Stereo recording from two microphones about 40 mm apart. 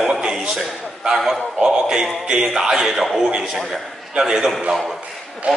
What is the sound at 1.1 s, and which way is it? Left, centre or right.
A man's voice, centre.